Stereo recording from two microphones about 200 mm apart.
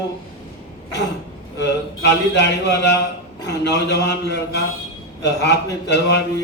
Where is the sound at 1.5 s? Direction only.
60° left (ahead or behind).